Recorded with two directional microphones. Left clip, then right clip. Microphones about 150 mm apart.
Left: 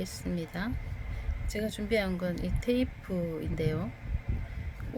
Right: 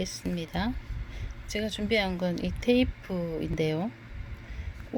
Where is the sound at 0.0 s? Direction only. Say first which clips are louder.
Right 3 dB; 20° right (ahead or behind).